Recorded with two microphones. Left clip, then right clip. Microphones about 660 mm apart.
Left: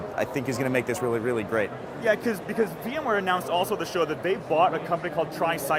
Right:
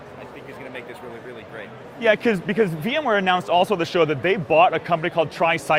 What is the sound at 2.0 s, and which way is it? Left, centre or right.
Speech, right.